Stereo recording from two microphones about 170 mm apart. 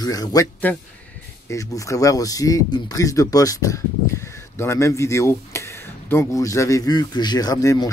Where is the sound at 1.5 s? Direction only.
20° left (ahead or behind).